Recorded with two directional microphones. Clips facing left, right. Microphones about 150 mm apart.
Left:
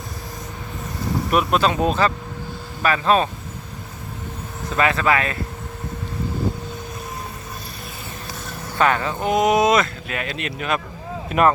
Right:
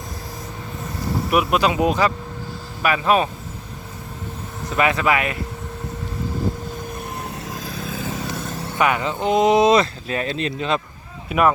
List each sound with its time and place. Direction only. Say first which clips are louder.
1.3 s speech: even; 10° right (ahead or behind)
4.8 s speech: even; 15° right (ahead or behind)
8.0 s vehicle: right 8 dB; 90° right
8.8 s speech: even; 15° right (ahead or behind)
11.3 s speech: left 1 dB; 5° right (ahead or behind)